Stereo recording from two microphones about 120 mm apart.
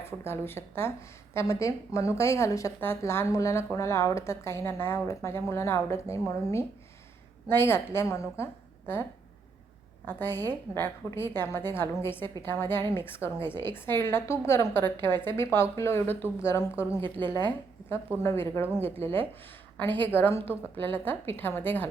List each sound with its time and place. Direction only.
0.0 s speech: 20° left (ahead or behind)
10.1 s a woman's voice: 20° left (ahead or behind)
18.2 s speech: 20° left (ahead or behind)
19.7 s a woman's voice: 15° left (ahead or behind)